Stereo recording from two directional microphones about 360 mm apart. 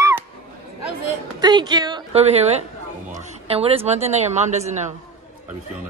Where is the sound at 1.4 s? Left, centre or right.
Centre.